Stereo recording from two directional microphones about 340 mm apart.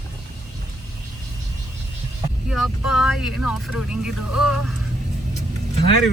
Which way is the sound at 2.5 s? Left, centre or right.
Centre.